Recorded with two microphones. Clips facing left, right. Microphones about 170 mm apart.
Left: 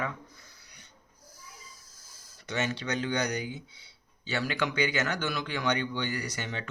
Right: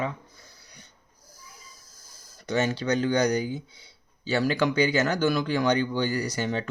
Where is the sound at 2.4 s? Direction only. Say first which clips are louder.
Right 6 dB; 40° right (ahead or behind).